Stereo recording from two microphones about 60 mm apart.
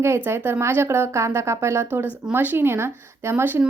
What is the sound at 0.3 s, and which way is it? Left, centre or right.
A woman's voice, right.